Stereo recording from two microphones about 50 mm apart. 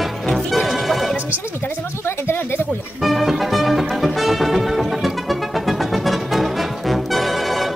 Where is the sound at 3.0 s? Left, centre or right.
Centre.